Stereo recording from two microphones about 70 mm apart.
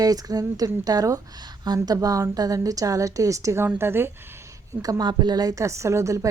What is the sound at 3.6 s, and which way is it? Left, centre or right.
Speech, right.